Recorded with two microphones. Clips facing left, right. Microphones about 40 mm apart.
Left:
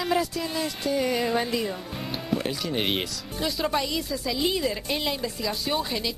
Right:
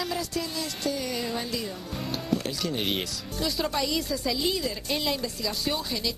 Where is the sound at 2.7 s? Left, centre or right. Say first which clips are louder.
Left 2 dB; left.